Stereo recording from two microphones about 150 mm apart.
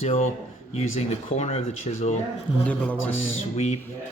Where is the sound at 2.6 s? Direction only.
10° left (ahead or behind).